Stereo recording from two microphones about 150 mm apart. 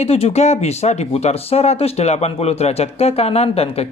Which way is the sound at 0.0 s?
45° left (ahead or behind).